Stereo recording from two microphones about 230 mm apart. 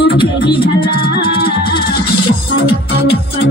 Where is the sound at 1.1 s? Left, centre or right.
Left.